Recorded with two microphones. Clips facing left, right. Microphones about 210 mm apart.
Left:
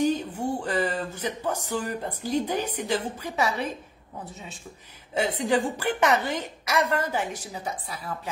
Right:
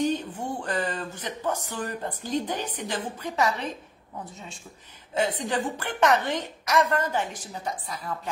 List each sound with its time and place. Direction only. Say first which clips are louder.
0.0 s a sound: left 2 dB; 10° left (ahead or behind)
2.0 s a woman's voice: even; 10° left (ahead or behind)
5.1 s a woman's voice: left 2 dB; 10° left (ahead or behind)